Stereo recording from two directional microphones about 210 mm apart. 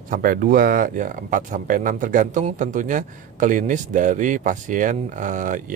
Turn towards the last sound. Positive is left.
turn(degrees=-35)  # may be behind; listen again after turning